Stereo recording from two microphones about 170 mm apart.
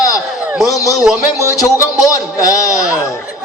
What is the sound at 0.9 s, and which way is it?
Speech, 5° right (ahead or behind).